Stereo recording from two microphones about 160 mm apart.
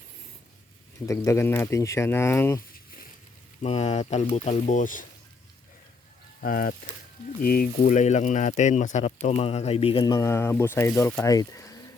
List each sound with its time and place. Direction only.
1.0 s speech: 20° left (ahead or behind)
3.6 s speech: 45° left (ahead or behind)
6.4 s speech: 65° left (ahead or behind); by 10.0 s 35° left (ahead or behind)
10.0 s speech: 20° left (ahead or behind)